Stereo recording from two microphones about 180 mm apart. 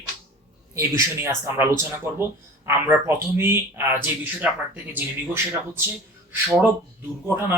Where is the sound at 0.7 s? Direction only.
15° right (ahead or behind).